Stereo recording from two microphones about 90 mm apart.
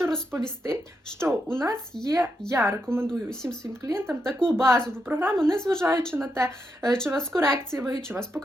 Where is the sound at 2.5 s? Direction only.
30° right (ahead or behind).